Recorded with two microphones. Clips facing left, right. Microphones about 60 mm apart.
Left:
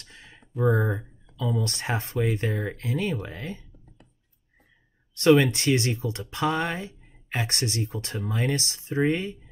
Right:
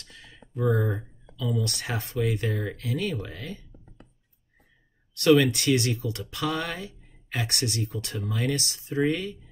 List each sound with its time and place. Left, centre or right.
0.0 s a sound: left
0.5 s speech: centre
1.6 s speech: left
5.1 s speech: left